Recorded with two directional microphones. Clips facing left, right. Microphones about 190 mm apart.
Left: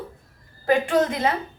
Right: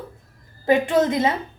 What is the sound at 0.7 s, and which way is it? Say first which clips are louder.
Speech: right 2 dB; 20° right (ahead or behind).